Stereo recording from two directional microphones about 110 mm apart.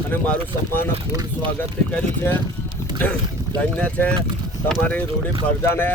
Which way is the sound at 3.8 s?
10° left (ahead or behind).